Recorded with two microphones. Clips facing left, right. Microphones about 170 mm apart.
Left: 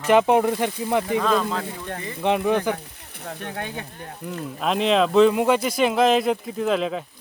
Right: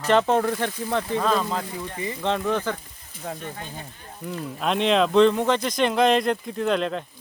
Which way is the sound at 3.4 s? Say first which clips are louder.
Left 4 dB; 70° left (ahead or behind).